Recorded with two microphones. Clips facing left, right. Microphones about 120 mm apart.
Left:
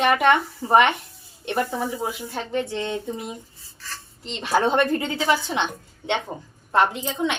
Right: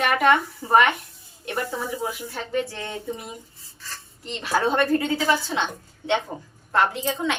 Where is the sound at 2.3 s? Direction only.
20° left (ahead or behind).